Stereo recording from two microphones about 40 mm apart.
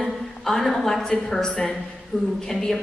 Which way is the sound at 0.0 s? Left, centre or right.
Centre.